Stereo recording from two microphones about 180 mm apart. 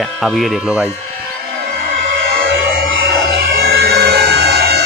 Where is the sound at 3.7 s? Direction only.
65° right (ahead or behind).